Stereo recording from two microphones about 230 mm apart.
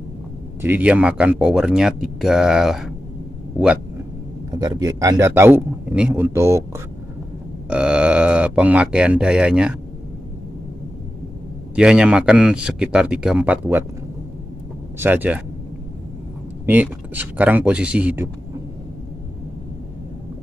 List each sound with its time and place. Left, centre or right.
0.6 s speech: centre
4.6 s speech: centre
7.7 s speech: centre
11.7 s speech: centre
15.0 s speech: centre
16.6 s speech: centre